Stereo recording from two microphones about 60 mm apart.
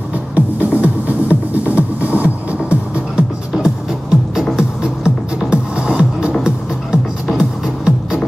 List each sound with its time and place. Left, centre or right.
0.8 s music: right
3.5 s music: centre